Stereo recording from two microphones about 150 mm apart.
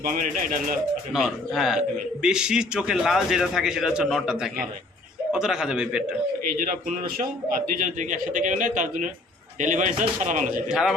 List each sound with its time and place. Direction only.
0.0 s speech: 70° right (ahead or behind)
1.1 s a man's voice: 5° right (ahead or behind)
6.5 s a man's voice: 70° right (ahead or behind)
10.7 s a man's voice: 5° right (ahead or behind)